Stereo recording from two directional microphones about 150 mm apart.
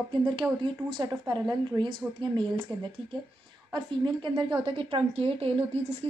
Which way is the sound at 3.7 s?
30° right (ahead or behind).